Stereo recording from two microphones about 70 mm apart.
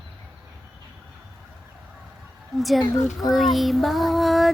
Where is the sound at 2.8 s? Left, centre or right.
Left.